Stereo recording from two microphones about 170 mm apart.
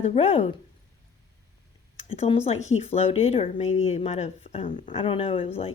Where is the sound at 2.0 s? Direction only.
35° left (ahead or behind).